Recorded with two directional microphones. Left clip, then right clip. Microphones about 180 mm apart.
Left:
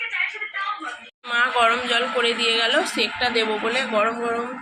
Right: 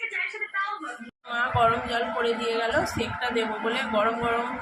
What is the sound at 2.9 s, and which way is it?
Speech, 25° left (ahead or behind).